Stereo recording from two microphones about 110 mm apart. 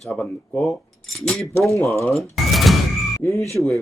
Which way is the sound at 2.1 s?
Centre (ahead or behind).